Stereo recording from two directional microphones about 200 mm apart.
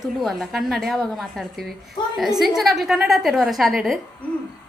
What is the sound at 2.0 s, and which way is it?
Speech, 20° left (ahead or behind).